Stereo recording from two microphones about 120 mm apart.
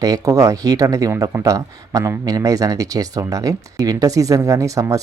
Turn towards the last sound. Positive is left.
turn(degrees=-25)  # may be behind; listen again after turning